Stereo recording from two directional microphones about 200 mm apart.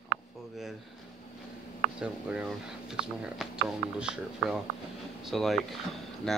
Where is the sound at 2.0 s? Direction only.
5° right (ahead or behind).